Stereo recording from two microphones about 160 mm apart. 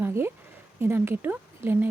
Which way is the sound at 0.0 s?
15° right (ahead or behind).